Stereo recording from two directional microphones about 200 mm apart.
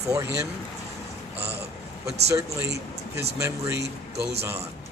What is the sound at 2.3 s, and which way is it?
Speech, 15° right (ahead or behind).